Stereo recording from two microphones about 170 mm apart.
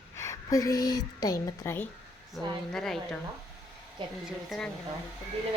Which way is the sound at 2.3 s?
Centre (ahead or behind).